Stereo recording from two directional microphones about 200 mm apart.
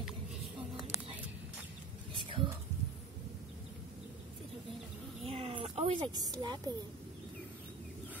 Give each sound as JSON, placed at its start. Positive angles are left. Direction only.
{"t": 2.1, "sound": "whispering", "side_deg": -25}
{"t": 5.2, "sound": "a sound", "side_deg": -30}
{"t": 6.1, "sound": "speech", "side_deg": -20}